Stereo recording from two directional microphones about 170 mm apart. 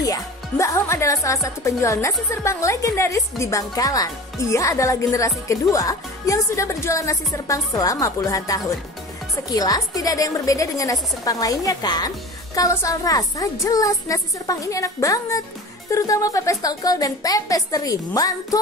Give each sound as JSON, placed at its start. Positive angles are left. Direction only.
{"t": 0.0, "sound": "a woman's voice", "side_deg": 20}